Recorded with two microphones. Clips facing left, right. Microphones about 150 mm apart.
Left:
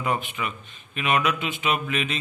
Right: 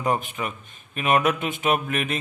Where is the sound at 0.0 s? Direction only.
40° right (ahead or behind).